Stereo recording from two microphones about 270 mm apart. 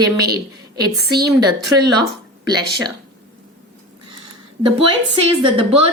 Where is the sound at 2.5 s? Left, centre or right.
Centre.